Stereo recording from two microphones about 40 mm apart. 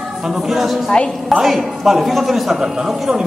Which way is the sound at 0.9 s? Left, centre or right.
Left.